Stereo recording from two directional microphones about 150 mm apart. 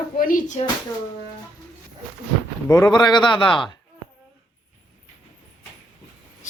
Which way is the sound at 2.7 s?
25° left (ahead or behind).